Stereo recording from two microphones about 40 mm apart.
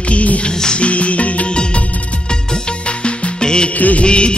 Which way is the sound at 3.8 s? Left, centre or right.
Left.